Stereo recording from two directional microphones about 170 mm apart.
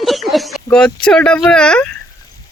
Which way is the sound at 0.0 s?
Centre (ahead or behind).